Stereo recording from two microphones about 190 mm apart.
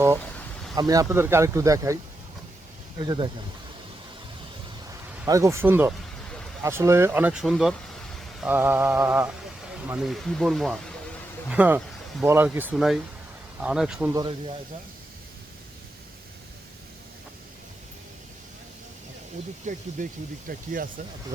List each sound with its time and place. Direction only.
0.8 s speech: 20° right (ahead or behind)
3.0 s speech: 25° right (ahead or behind)
4.9 s speech: 15° right (ahead or behind)
14.1 s speech: 25° right (ahead or behind)
19.7 s speech: 40° right (ahead or behind)